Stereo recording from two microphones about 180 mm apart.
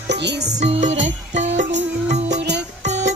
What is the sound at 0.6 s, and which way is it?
Music, 40° right (ahead or behind).